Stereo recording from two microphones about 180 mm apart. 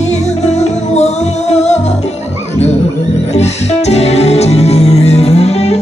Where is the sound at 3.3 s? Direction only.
35° left (ahead or behind).